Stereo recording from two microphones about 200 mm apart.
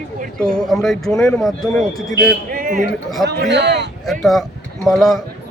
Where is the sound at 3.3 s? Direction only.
55° right (ahead or behind).